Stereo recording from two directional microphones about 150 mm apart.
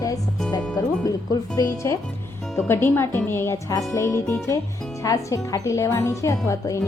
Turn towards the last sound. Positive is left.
turn(degrees=20)  # may be behind; listen again after turning